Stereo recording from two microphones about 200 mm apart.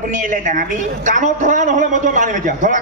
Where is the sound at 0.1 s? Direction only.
40° right (ahead or behind).